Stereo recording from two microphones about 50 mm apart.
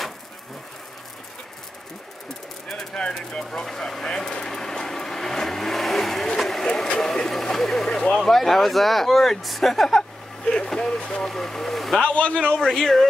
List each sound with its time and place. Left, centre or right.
2.7 s a sound: centre
7.0 s speech: centre
12.0 s a man's voice: left
12.5 s speech: centre